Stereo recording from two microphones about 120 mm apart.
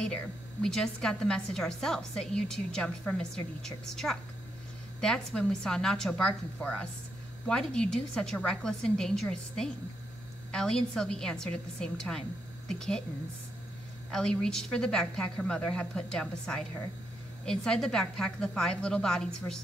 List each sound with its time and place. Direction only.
0.0 s a woman's voice: 5° left (ahead or behind)
14.1 s a woman's voice: 5° left (ahead or behind)